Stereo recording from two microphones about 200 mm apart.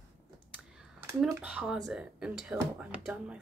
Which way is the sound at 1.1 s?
5° right (ahead or behind).